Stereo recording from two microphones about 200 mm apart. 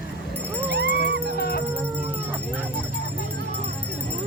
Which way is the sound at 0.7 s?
60° right (ahead or behind).